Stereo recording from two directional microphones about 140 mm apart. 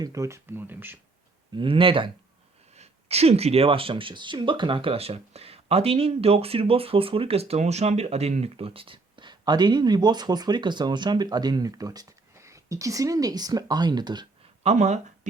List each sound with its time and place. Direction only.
0.0 s speech: 25° right (ahead or behind)
1.5 s speech: 40° right (ahead or behind)
14.6 s speech: 55° right (ahead or behind)